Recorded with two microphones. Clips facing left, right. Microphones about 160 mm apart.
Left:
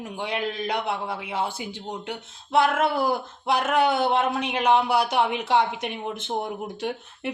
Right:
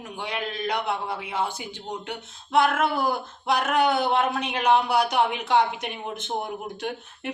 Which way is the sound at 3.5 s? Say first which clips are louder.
Left 1 dB; 25° left (ahead or behind).